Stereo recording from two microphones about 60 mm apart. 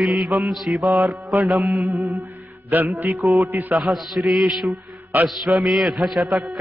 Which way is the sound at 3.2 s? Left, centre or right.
Right.